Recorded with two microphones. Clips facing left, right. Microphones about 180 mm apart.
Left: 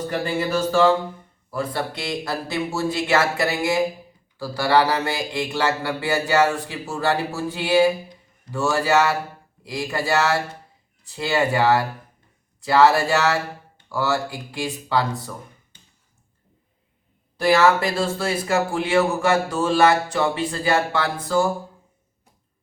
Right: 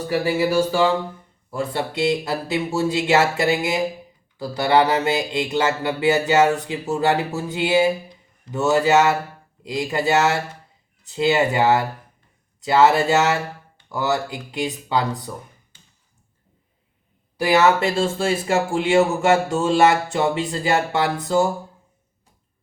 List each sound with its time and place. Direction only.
0.1 s speech: 10° right (ahead or behind)
1.5 s speech: 25° right (ahead or behind)
17.3 s speech: 15° right (ahead or behind)